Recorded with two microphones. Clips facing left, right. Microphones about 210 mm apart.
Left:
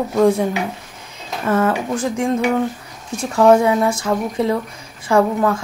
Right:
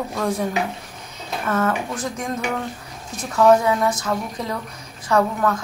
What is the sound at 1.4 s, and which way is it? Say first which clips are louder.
A woman's voice: left 5 dB; 25° left (ahead or behind).